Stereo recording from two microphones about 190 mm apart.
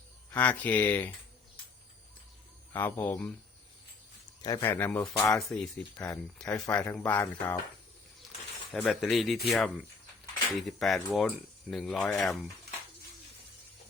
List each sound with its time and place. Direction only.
0.3 s speech: 10° left (ahead or behind)
2.7 s speech: 10° left (ahead or behind)
4.4 s speech: 15° left (ahead or behind)
5.5 s speech: 5° left (ahead or behind)
8.7 s speech: centre (ahead or behind)